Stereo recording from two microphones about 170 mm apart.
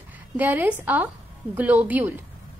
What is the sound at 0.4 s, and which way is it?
A woman's voice, 10° right (ahead or behind).